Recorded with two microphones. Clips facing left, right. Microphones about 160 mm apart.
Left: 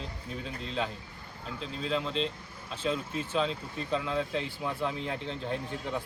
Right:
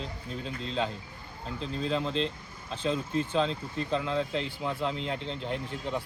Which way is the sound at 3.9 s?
25° right (ahead or behind).